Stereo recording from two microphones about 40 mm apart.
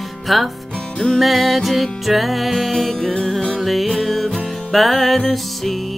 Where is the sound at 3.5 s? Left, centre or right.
Centre.